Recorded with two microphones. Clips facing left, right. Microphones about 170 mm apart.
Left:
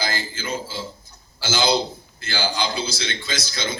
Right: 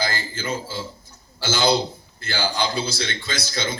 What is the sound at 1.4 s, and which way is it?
A man's voice, 60° right (ahead or behind).